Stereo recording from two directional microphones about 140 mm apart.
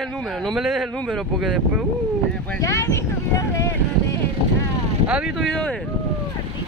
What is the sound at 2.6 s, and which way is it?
Speech, 20° left (ahead or behind).